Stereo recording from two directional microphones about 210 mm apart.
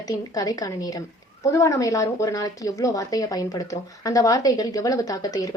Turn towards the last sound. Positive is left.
turn(degrees=20)  # may be behind; listen again after turning